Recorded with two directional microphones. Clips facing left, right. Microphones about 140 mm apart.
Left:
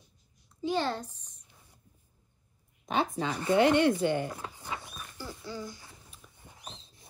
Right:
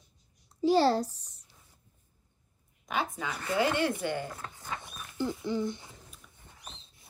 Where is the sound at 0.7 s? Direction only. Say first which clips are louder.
Right 7 dB; 35° right (ahead or behind).